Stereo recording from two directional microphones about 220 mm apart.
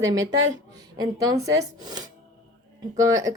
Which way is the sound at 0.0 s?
15° right (ahead or behind).